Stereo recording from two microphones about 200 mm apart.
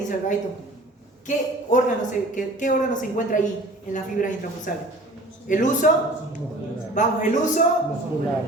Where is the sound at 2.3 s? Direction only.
40° left (ahead or behind).